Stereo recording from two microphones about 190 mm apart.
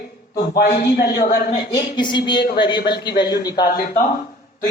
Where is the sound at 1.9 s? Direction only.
25° left (ahead or behind).